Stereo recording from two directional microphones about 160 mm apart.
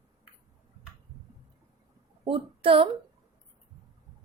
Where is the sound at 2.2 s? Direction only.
35° right (ahead or behind).